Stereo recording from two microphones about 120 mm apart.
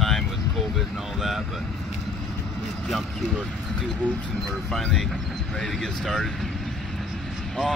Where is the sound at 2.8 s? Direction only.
Centre (ahead or behind).